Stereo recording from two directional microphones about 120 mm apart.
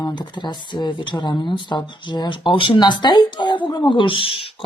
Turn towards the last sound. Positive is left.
turn(degrees=50)  # may be behind; listen again after turning